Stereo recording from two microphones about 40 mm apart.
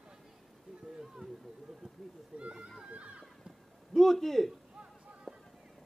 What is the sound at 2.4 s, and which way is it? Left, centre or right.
Speech, right.